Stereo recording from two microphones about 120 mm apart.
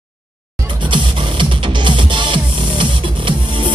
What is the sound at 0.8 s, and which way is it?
Music, 45° right (ahead or behind).